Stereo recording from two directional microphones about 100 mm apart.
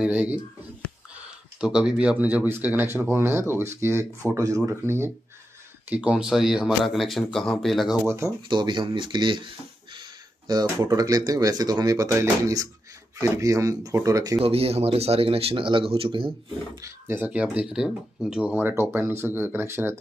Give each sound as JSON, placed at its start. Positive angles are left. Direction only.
{"t": 0.0, "sound": "speech", "side_deg": -15}
{"t": 5.9, "sound": "speech", "side_deg": -10}
{"t": 8.0, "sound": "speech", "side_deg": -25}
{"t": 8.5, "sound": "speech", "side_deg": -50}
{"t": 14.4, "sound": "speech", "side_deg": -80}
{"t": 17.2, "sound": "speech", "side_deg": -15}